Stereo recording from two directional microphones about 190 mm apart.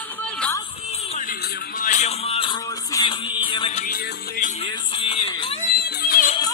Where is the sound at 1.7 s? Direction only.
40° left (ahead or behind).